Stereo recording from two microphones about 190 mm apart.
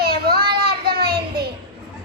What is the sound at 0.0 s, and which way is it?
Child singing, 55° right (ahead or behind).